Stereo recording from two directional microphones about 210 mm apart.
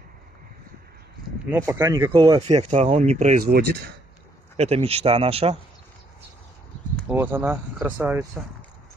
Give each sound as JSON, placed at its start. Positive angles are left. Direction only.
{"t": 1.5, "sound": "speech", "side_deg": -10}
{"t": 2.1, "sound": "speech", "side_deg": -25}
{"t": 4.6, "sound": "speech", "side_deg": -30}
{"t": 7.1, "sound": "speech", "side_deg": -10}